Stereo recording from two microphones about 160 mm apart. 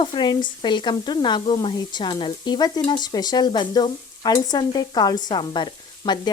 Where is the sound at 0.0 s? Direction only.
30° left (ahead or behind).